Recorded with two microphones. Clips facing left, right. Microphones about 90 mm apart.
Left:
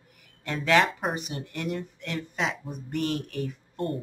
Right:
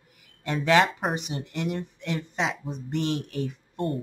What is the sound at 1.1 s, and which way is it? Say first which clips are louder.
Speech: right 3 dB; 20° right (ahead or behind).